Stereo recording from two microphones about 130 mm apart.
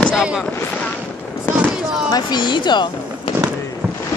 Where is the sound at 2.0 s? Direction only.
30° left (ahead or behind).